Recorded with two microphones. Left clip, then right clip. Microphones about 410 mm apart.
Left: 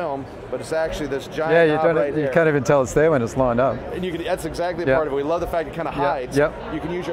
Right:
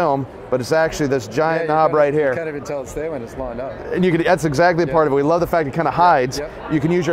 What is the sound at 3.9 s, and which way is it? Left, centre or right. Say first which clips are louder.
Speech: right 8 dB; right.